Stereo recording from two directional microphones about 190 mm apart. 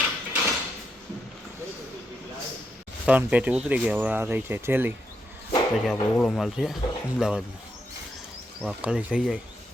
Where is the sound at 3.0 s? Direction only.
5° right (ahead or behind).